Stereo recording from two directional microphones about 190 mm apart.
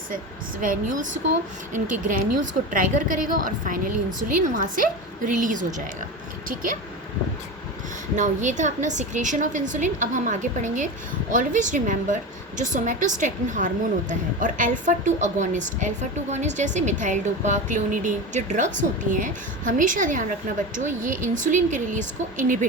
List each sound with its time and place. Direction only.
0.6 s a woman's voice: 45° right (ahead or behind)
8.1 s a woman's voice: 40° right (ahead or behind)